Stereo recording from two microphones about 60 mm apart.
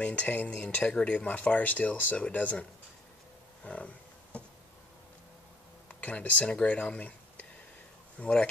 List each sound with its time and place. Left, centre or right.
0.0 s speech: left
3.6 s a sound: left
5.9 s speech: left